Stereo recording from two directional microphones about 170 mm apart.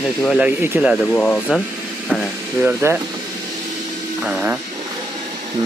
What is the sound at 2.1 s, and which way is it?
Speech, 5° right (ahead or behind).